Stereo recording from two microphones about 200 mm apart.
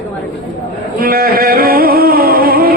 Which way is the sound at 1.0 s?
50° right (ahead or behind).